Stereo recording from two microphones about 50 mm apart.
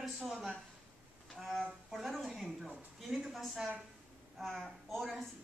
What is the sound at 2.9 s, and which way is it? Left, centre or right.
A woman's voice, centre.